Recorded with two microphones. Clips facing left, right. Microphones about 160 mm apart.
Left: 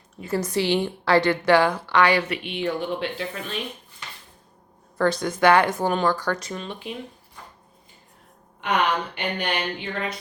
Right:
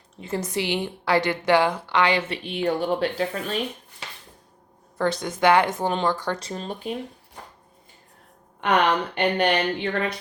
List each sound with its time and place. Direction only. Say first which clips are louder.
0.2 s a woman's voice: left 3 dB; 25° right (ahead or behind)
2.4 s speech: right 2 dB; 40° right (ahead or behind)
4.9 s a woman's voice: left 2 dB; 20° right (ahead or behind); by 6.9 s 40° right (ahead or behind)
9.1 s speech: right 6 dB; 60° right (ahead or behind)